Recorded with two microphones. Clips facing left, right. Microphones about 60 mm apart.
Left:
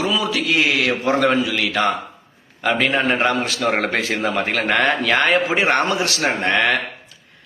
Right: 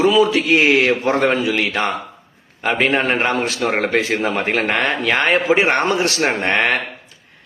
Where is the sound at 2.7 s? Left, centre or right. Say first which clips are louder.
Right 2 dB; right.